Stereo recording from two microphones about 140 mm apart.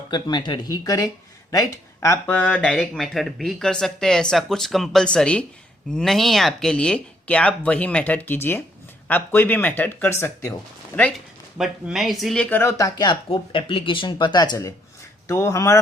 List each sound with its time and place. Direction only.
0.1 s speech: 30° left (ahead or behind)
2.2 s speech: 10° left (ahead or behind)
11.5 s speech: 5° right (ahead or behind); by 15.8 s 20° left (ahead or behind)